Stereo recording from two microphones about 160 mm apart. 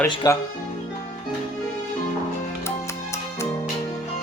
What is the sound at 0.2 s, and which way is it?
Speech, 25° left (ahead or behind).